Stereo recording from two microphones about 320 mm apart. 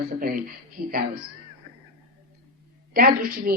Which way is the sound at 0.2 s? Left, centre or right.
Right.